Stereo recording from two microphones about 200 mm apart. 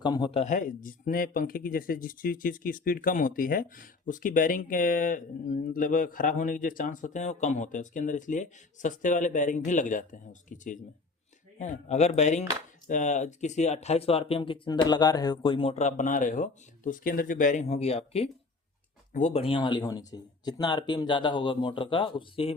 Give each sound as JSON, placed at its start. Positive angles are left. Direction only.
{"t": 0.0, "sound": "speech", "side_deg": 20}